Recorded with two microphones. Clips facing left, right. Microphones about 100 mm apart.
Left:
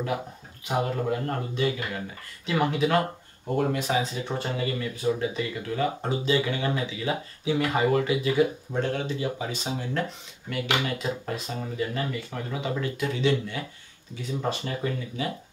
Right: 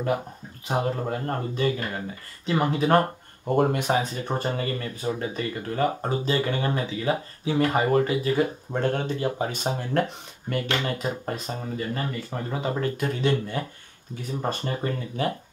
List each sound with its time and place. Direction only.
0.7 s speech: 30° right (ahead or behind); by 10.6 s 55° right (ahead or behind)
10.6 s speech: 15° left (ahead or behind)
10.9 s speech: 40° right (ahead or behind)